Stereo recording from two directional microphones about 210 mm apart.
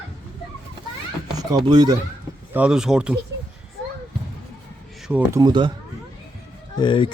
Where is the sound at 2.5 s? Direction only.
5° right (ahead or behind).